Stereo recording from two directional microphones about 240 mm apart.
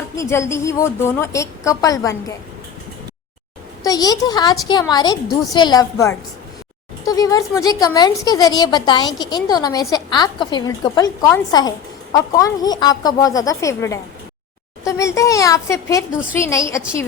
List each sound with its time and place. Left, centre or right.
0.2 s a woman's voice: centre
3.8 s a woman's voice: centre